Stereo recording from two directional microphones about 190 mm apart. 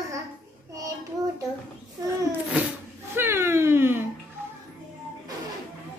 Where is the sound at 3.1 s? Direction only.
10° right (ahead or behind).